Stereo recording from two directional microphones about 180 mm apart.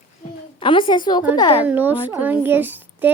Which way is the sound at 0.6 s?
25° left (ahead or behind).